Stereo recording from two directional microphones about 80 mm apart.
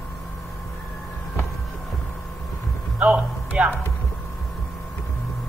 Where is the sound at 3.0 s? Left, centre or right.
Centre.